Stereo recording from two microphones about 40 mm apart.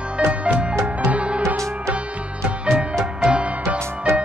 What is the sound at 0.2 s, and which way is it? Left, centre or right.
Music, right.